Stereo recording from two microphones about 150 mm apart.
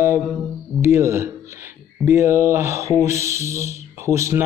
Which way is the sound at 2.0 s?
15° right (ahead or behind).